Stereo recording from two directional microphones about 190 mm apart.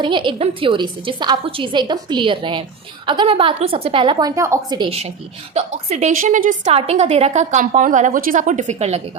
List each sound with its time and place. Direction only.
0.0 s a woman's voice: 25° right (ahead or behind)